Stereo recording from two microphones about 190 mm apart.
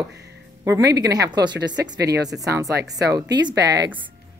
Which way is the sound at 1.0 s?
20° right (ahead or behind).